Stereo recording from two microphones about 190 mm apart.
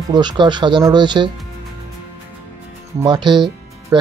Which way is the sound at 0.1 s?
25° right (ahead or behind).